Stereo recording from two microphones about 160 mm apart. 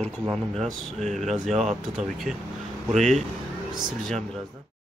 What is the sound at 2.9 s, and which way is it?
Speech, 45° right (ahead or behind).